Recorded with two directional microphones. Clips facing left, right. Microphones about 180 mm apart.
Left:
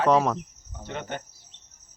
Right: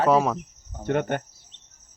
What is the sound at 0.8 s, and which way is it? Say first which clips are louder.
Speech: right 10 dB; 55° right (ahead or behind).